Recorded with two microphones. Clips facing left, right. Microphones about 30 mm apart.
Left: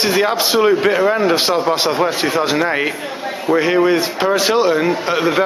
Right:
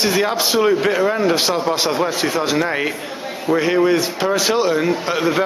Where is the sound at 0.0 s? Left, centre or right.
Centre.